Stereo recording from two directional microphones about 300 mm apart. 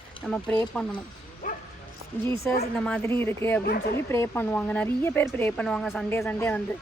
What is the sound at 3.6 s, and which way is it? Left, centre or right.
Speech, left.